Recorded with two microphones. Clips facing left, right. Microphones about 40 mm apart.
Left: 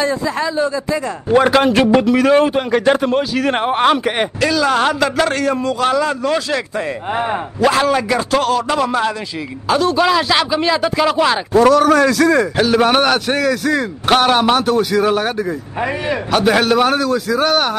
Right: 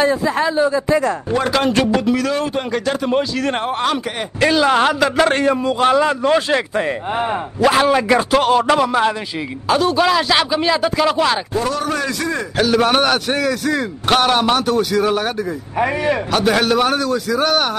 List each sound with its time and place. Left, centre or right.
0.0 s speech: right
1.3 s a man's voice: left
3.1 s a man's voice: centre
3.5 s a man's voice: left
4.4 s a man's voice: right
4.6 s speech: centre
5.3 s speech: right
8.8 s a man's voice: centre
11.8 s a man's voice: left
12.5 s a man's voice: centre